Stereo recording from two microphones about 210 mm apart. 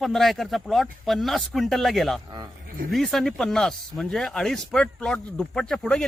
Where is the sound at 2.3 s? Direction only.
20° right (ahead or behind).